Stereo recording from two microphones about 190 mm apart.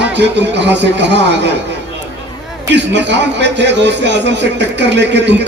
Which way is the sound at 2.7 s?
65° right (ahead or behind).